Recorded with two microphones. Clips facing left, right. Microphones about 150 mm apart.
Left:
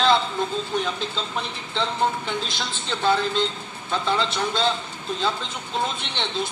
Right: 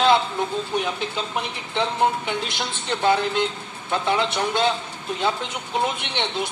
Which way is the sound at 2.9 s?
60° right (ahead or behind).